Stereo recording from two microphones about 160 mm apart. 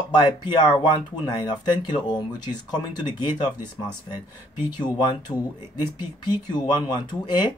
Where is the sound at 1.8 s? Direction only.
25° left (ahead or behind).